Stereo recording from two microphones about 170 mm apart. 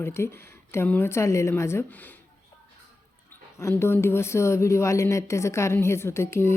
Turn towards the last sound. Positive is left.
turn(degrees=15)  # may be behind; listen again after turning